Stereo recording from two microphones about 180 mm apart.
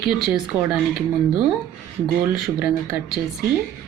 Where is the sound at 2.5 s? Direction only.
5° right (ahead or behind).